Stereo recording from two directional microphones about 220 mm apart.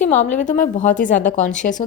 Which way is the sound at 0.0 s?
35° left (ahead or behind).